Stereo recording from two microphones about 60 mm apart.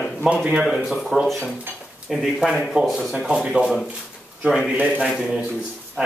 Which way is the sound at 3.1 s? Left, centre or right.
Centre.